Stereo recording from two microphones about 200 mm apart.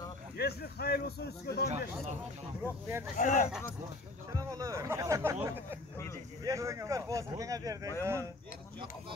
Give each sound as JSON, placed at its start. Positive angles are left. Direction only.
{"t": 0.4, "sound": "a man's voice", "side_deg": 50}
{"t": 3.2, "sound": "speech", "side_deg": 40}
{"t": 4.3, "sound": "speech", "side_deg": -15}